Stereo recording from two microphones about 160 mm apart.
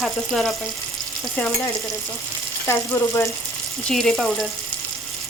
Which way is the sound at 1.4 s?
15° left (ahead or behind).